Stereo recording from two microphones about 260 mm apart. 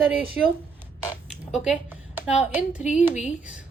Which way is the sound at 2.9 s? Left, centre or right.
Centre.